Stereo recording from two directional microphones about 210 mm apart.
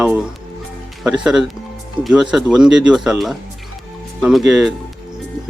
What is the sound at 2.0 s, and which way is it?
Speech, 20° right (ahead or behind).